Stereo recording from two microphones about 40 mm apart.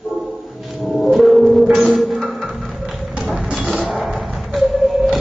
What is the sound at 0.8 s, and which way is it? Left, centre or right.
Music, centre.